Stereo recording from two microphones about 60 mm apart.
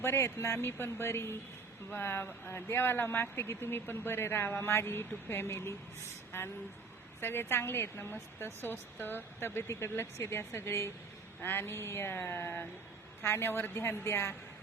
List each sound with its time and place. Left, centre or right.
0.0 s a woman's voice: left
11.3 s a woman's voice: left